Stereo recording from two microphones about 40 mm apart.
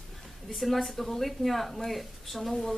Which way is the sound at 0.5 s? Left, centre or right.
Centre.